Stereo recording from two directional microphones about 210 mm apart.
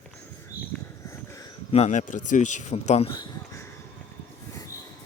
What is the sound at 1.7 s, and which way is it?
Speech, 35° left (ahead or behind).